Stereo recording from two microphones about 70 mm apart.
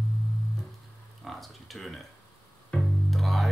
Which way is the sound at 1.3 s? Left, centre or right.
Centre.